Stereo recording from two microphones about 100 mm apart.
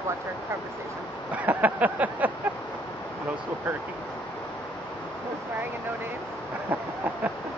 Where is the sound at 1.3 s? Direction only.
15° right (ahead or behind).